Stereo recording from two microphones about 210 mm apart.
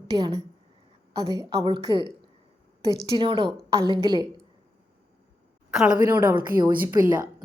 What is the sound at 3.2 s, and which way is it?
A woman's voice, 25° right (ahead or behind).